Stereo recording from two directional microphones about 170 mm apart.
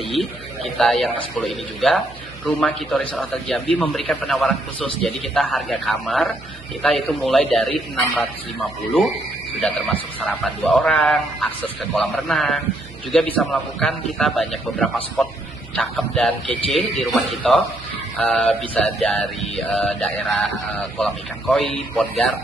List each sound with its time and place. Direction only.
0.7 s mantra: centre (ahead or behind)
9.6 s mantra: 5° left (ahead or behind)